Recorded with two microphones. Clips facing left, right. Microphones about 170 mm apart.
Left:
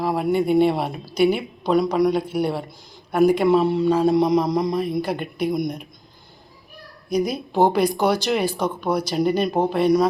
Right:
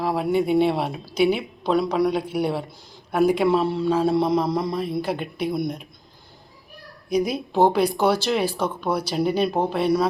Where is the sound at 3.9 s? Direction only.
5° right (ahead or behind).